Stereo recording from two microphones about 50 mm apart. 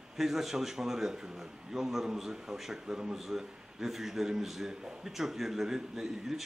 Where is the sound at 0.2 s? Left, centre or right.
Centre.